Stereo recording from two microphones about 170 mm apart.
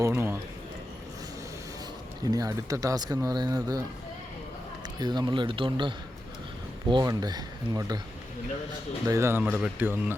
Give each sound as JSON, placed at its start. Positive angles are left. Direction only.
{"t": 0.1, "sound": "a sound", "side_deg": -15}
{"t": 2.2, "sound": "speech", "side_deg": -20}
{"t": 4.9, "sound": "speech", "side_deg": -25}
{"t": 6.9, "sound": "speech", "side_deg": -25}
{"t": 9.0, "sound": "speech", "side_deg": -15}